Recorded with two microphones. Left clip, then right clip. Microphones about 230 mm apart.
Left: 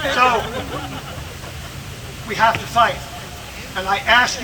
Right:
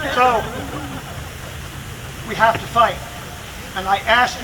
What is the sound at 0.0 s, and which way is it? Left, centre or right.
Speech, left.